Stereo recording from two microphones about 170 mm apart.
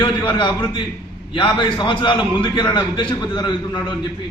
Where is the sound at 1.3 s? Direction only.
30° left (ahead or behind).